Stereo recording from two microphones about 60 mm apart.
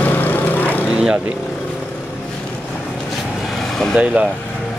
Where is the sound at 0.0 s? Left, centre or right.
Left.